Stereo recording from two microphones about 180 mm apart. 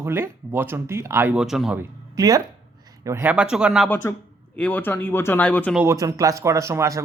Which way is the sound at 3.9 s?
15° left (ahead or behind).